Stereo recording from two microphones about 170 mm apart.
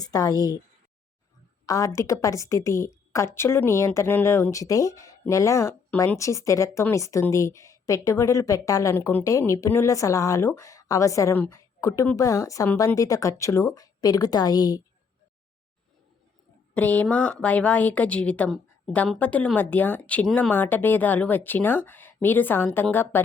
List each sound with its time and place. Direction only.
0.0 s a woman's voice: 20° left (ahead or behind)
1.6 s a woman's voice: 20° left (ahead or behind)
16.7 s a woman's voice: 10° left (ahead or behind)